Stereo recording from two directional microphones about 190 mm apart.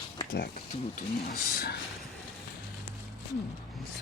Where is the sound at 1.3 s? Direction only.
55° left (ahead or behind).